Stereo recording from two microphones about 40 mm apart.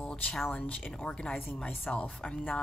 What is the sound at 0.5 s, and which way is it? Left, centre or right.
Speech, left.